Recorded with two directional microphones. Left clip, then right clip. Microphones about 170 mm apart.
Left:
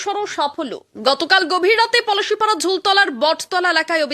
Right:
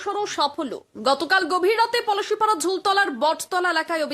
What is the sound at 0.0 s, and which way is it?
A woman's voice, 10° left (ahead or behind).